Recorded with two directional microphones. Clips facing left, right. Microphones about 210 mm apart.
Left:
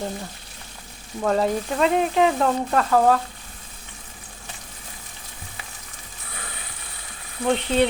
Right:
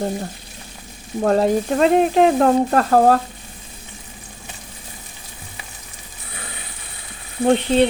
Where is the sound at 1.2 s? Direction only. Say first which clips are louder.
Right 5 dB; 40° right (ahead or behind).